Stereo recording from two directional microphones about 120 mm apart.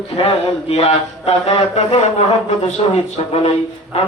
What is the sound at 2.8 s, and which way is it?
Speech, 50° left (ahead or behind).